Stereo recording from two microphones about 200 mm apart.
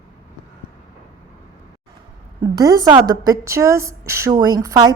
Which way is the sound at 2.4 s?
20° right (ahead or behind).